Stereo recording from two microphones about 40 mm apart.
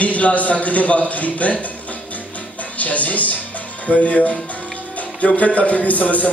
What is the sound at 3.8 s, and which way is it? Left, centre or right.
Speech, left.